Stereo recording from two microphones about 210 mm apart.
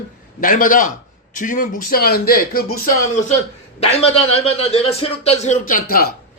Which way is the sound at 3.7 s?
30° left (ahead or behind).